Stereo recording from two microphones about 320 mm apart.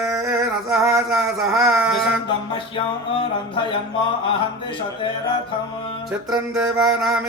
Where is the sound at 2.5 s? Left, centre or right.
Centre.